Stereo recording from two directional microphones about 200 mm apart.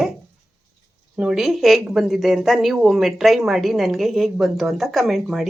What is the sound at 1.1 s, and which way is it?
Speech, 5° right (ahead or behind).